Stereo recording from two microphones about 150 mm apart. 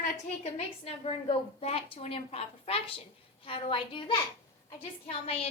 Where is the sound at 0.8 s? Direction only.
40° left (ahead or behind).